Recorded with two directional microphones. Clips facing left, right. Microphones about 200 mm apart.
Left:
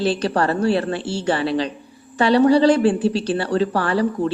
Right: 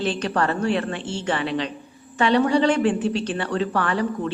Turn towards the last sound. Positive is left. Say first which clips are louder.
# left 4 dB
turn(degrees=35)  # may be behind; listen again after turning